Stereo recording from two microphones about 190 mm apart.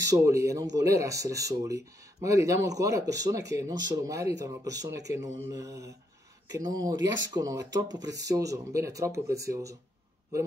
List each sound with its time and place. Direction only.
0.0 s speech: 15° right (ahead or behind)